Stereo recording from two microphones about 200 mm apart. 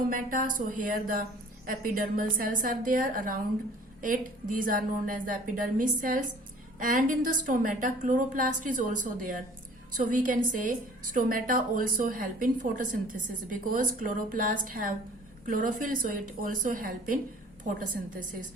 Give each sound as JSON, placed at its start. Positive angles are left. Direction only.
{"t": 0.1, "sound": "a woman's voice", "side_deg": -40}